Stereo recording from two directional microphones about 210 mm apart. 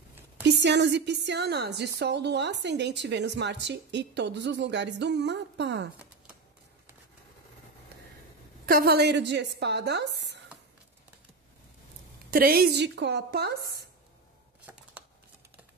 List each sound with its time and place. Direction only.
0.4 s a woman's voice: 55° right (ahead or behind)
8.6 s a woman's voice: 45° right (ahead or behind)
12.3 s a woman's voice: 45° right (ahead or behind)
14.7 s a sound: 10° right (ahead or behind)